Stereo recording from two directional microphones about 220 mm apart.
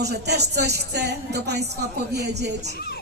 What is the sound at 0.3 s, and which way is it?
Music, 50° right (ahead or behind).